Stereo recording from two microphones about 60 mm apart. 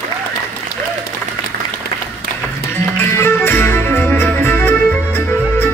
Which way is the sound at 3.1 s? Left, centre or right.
Left.